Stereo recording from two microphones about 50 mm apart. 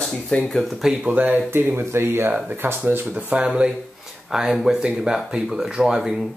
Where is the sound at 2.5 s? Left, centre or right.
Right.